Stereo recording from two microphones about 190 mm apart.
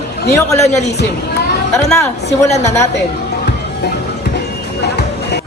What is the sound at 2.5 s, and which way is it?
Speech, 35° left (ahead or behind).